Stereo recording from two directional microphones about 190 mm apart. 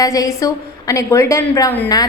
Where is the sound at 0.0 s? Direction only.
20° left (ahead or behind).